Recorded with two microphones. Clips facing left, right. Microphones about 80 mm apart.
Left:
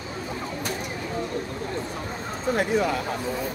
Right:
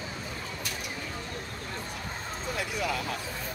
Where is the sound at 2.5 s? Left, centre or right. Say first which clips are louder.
Left 11 dB; left.